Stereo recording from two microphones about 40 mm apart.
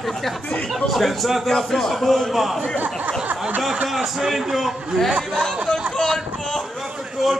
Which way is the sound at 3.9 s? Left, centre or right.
Centre.